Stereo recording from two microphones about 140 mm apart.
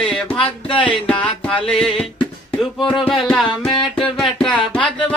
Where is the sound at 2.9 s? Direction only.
Centre (ahead or behind).